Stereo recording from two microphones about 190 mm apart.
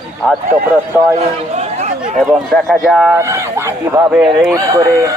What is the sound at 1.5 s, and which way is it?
Chatter, 35° right (ahead or behind).